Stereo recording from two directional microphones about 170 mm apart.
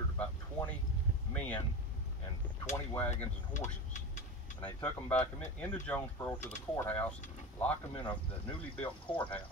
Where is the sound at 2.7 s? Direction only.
15° left (ahead or behind).